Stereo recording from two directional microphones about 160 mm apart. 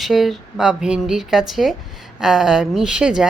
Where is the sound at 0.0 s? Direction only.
Centre (ahead or behind).